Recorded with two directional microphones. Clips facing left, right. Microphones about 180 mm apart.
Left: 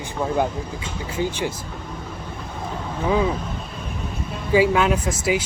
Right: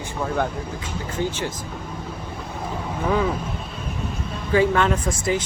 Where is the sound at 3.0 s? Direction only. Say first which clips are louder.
Left 1 dB; 5° left (ahead or behind).